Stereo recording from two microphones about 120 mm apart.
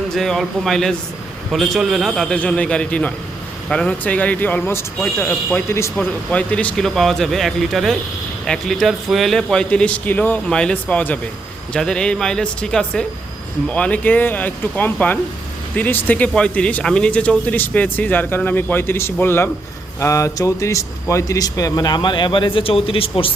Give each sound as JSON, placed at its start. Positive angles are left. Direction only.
{"t": 0.1, "sound": "speech", "side_deg": 5}
{"t": 6.1, "sound": "a man's voice", "side_deg": 10}